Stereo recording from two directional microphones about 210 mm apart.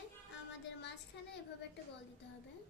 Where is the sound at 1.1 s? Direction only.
55° left (ahead or behind).